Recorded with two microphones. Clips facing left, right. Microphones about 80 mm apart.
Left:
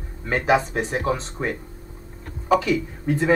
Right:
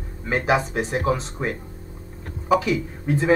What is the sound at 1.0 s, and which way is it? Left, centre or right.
Speech, centre.